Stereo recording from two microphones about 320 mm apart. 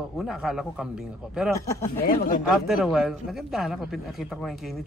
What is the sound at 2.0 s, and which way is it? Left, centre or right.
Speech, left.